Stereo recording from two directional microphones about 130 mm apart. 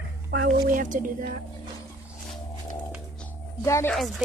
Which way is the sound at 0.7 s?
90° right.